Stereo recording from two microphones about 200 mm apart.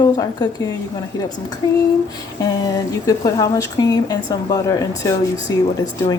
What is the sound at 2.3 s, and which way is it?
Speech, 20° left (ahead or behind).